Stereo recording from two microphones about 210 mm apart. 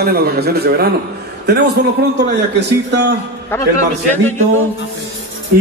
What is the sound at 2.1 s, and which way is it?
Speech, 55° right (ahead or behind).